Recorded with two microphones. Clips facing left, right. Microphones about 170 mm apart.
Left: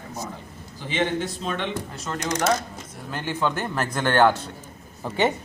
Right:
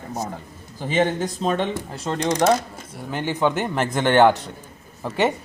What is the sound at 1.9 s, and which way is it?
Speech, 30° right (ahead or behind).